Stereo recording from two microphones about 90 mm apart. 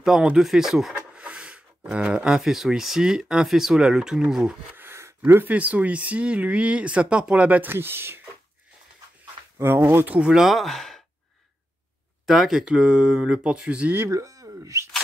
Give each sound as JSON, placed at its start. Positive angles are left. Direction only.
{"t": 0.0, "sound": "a sound", "side_deg": -5}
{"t": 1.9, "sound": "speech", "side_deg": -10}
{"t": 4.7, "sound": "speech", "side_deg": -25}
{"t": 9.6, "sound": "speech", "side_deg": -25}
{"t": 10.1, "sound": "speech", "side_deg": -5}
{"t": 12.3, "sound": "speech", "side_deg": -5}
{"t": 13.9, "sound": "speech", "side_deg": -35}